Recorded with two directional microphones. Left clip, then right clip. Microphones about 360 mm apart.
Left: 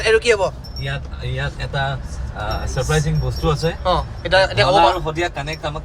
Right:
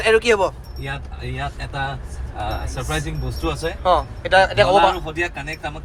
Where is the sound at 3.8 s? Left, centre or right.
Centre.